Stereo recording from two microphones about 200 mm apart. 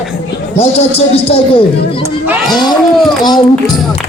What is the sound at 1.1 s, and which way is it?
Speech, 30° left (ahead or behind).